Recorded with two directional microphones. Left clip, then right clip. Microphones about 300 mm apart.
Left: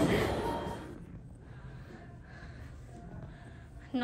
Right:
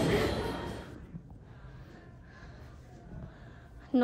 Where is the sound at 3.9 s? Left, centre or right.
Centre.